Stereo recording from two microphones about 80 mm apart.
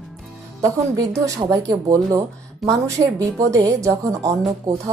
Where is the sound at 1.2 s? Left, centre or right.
Right.